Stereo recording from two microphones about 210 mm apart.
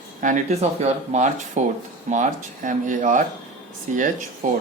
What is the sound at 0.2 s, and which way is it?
Speech, 40° right (ahead or behind).